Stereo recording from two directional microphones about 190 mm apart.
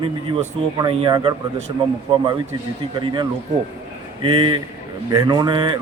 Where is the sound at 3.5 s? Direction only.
35° right (ahead or behind).